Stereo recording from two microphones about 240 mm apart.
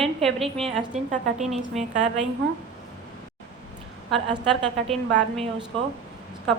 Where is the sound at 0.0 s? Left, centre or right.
Centre.